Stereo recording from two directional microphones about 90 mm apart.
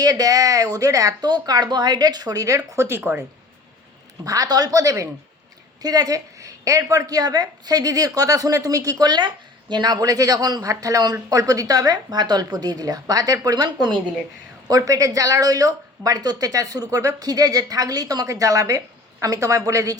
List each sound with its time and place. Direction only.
0.0 s a woman's voice: 45° right (ahead or behind)
3.0 s speech: 20° right (ahead or behind)
4.2 s a woman's voice: 40° right (ahead or behind)